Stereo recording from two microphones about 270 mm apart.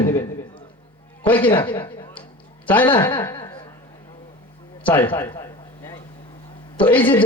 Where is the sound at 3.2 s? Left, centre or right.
Centre.